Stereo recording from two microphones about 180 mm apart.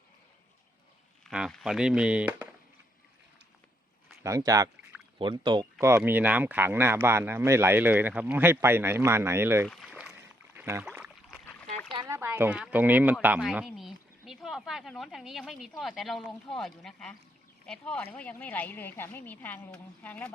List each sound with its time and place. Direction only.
1.2 s speech: centre (ahead or behind)
4.2 s speech: 20° right (ahead or behind)
5.8 s speech: 15° right (ahead or behind)
9.6 s rowboat: 5° right (ahead or behind)
11.9 s a sound: 15° right (ahead or behind)
12.7 s a woman's voice: 10° right (ahead or behind); by 20.3 s 5° left (ahead or behind)